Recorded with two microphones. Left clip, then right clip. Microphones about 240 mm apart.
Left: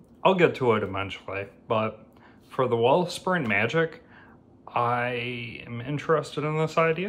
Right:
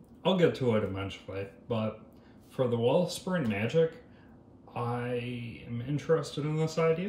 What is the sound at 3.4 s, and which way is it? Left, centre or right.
Speech, centre.